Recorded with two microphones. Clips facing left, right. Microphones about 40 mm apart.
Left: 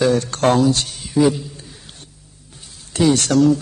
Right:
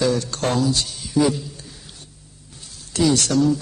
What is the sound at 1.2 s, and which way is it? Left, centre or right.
Speech, left.